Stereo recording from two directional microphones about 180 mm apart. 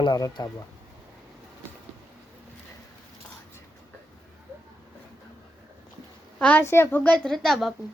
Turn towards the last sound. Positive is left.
turn(degrees=0)  # may be behind; listen again after turning